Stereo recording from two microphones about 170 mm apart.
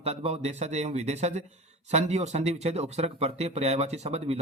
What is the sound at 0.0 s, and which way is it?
Speech, 40° right (ahead or behind).